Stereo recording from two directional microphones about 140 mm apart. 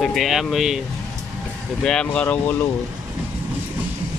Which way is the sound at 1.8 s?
5° left (ahead or behind).